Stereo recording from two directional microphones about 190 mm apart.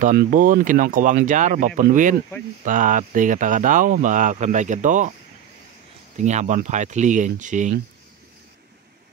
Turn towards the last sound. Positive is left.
turn(degrees=-40)  # may be behind; listen again after turning